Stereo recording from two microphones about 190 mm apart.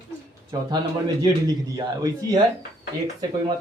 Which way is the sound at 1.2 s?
20° right (ahead or behind).